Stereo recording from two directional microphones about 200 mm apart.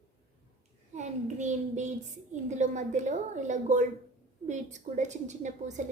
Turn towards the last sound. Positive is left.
turn(degrees=-35)  # may be behind; listen again after turning